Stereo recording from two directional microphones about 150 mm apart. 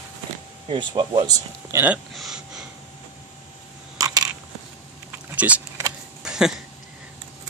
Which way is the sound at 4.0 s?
25° right (ahead or behind).